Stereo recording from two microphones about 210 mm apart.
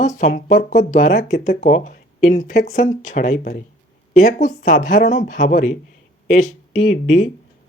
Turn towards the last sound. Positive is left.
turn(degrees=35)  # may be behind; listen again after turning